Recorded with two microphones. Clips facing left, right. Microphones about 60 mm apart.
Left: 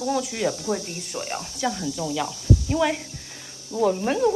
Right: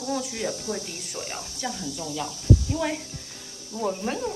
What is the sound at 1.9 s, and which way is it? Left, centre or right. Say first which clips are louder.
Speech: left 5 dB; left.